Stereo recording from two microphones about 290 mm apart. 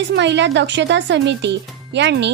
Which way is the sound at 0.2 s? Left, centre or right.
Right.